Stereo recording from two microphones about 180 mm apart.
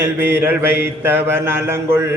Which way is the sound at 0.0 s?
10° right (ahead or behind).